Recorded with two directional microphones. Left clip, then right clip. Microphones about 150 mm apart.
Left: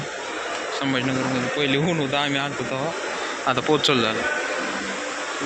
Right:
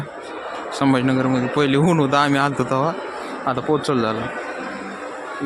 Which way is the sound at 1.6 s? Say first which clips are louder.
Right 6 dB; 60° right (ahead or behind).